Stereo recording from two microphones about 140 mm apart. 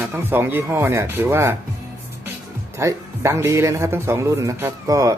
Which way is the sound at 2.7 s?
20° right (ahead or behind).